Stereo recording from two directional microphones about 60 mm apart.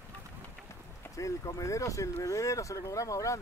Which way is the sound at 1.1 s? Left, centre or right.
Left.